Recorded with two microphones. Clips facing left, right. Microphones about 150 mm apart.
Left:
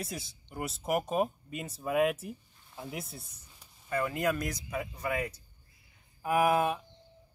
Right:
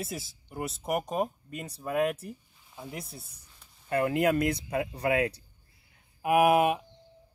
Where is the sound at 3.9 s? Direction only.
60° right (ahead or behind).